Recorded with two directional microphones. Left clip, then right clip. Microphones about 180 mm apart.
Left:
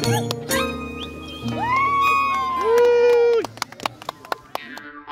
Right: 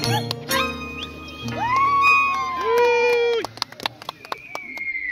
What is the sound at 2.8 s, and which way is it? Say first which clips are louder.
Run: left 3 dB; 50° left (ahead or behind).